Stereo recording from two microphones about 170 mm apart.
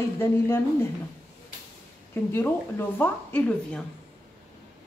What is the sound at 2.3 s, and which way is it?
Speech, 15° left (ahead or behind).